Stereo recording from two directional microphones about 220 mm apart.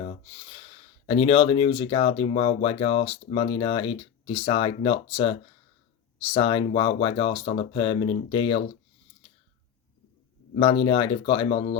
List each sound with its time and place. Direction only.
0.0 s a sound: 25° left (ahead or behind)
1.0 s speech: 25° left (ahead or behind)
10.5 s speech: 25° left (ahead or behind)